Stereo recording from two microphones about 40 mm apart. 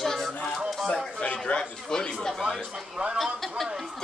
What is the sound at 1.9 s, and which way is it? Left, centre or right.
Speech, centre.